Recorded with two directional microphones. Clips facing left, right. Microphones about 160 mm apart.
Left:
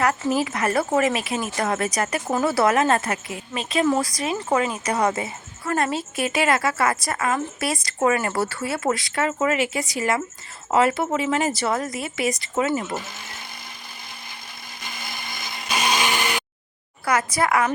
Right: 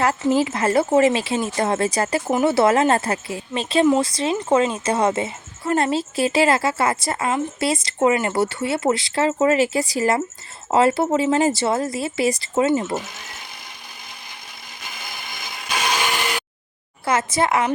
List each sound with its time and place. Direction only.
0.0 s a woman's voice: 25° right (ahead or behind)
17.1 s a woman's voice: 25° right (ahead or behind)